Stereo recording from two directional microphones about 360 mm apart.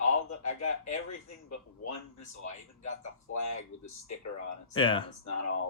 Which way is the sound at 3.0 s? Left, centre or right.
Left.